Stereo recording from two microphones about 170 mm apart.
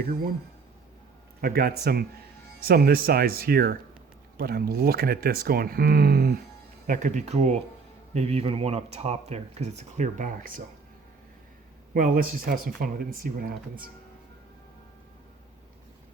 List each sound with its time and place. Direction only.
1.4 s speech: 60° right (ahead or behind)
6.8 s speech: 50° right (ahead or behind)
11.9 s speech: 55° right (ahead or behind)